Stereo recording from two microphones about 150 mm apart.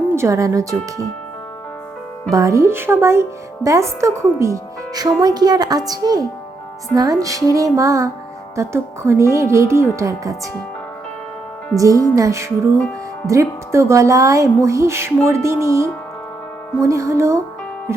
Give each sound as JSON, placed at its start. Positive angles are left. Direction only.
{"t": 0.2, "sound": "speech", "side_deg": -20}
{"t": 2.3, "sound": "speech", "side_deg": -20}
{"t": 11.8, "sound": "speech", "side_deg": -20}